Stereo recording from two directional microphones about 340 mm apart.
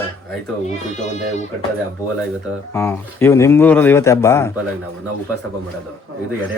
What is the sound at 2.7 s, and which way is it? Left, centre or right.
Speech, centre.